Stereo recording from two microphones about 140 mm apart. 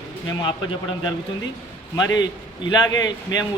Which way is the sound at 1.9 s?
30° left (ahead or behind).